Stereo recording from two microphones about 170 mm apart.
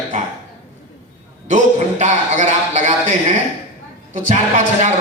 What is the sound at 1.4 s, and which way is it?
A man's voice, 45° right (ahead or behind).